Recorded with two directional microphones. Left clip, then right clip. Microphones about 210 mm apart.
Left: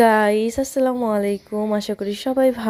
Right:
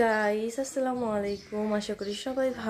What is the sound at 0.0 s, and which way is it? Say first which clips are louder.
Speech: left 10 dB; 45° left (ahead or behind).